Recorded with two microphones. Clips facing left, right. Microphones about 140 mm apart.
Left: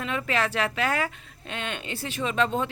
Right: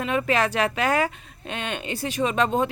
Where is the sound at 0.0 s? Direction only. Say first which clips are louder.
Right 5 dB; 20° right (ahead or behind).